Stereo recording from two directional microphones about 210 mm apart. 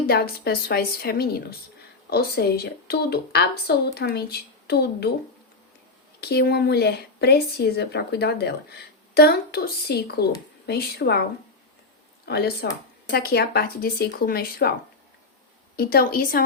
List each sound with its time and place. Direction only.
0.1 s speech: 50° left (ahead or behind)
6.1 s speech: 50° left (ahead or behind)
12.2 s speech: 50° left (ahead or behind)
15.7 s speech: 45° left (ahead or behind)